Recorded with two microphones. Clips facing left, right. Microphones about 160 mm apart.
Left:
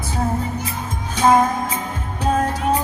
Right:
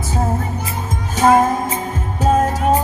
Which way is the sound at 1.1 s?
45° right (ahead or behind).